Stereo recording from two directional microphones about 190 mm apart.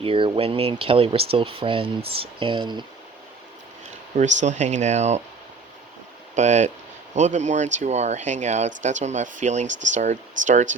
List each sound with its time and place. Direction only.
0.0 s speech: 30° right (ahead or behind)
4.2 s speech: 40° right (ahead or behind)
6.3 s speech: 40° right (ahead or behind)